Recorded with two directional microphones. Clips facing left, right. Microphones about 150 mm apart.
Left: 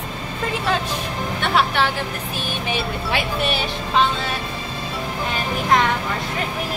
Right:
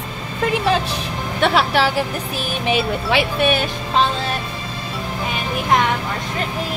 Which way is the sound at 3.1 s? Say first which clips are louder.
Right 5 dB; 80° right.